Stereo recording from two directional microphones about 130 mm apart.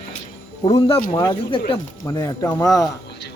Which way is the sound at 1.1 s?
35° left (ahead or behind).